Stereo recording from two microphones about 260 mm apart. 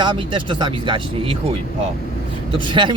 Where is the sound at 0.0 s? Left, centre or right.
Centre.